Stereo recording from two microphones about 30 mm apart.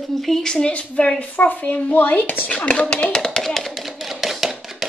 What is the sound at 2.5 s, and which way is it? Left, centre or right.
Speech, left.